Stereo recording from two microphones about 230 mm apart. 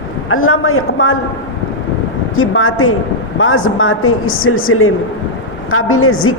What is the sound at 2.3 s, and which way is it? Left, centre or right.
A man's voice, left.